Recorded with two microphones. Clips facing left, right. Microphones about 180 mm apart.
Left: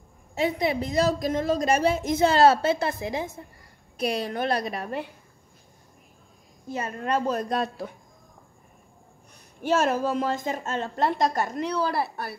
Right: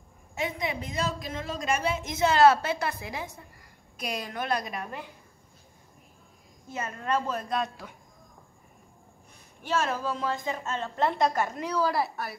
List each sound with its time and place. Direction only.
0.3 s a woman's voice: 35° left (ahead or behind)
6.7 s a woman's voice: 35° left (ahead or behind)
9.6 s a woman's voice: 45° left (ahead or behind)